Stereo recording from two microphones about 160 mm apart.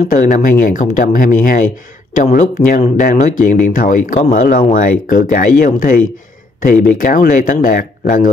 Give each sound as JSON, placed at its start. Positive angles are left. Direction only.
{"t": 0.1, "sound": "speech", "side_deg": 55}